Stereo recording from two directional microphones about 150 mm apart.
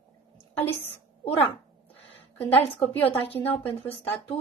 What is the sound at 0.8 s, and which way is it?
Speech, 40° left (ahead or behind).